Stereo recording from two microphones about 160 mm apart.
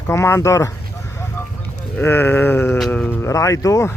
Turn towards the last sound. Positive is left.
turn(degrees=20)  # may be behind; listen again after turning